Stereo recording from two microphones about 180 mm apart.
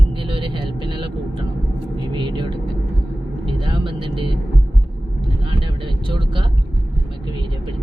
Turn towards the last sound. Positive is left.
turn(degrees=-25)  # may be behind; listen again after turning